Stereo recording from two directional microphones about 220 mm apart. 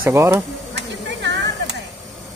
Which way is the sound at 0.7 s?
50° right (ahead or behind).